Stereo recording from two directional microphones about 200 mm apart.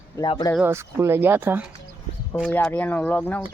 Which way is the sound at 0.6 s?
10° right (ahead or behind).